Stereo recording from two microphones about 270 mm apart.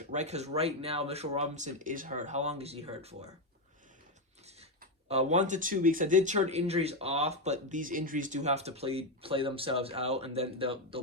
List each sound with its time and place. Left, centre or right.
0.1 s speech: right
5.0 s speech: right